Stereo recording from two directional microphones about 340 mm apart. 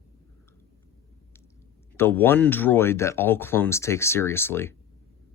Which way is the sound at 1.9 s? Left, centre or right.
Centre.